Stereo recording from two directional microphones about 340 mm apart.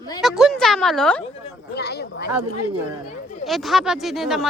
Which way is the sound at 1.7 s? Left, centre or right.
Left.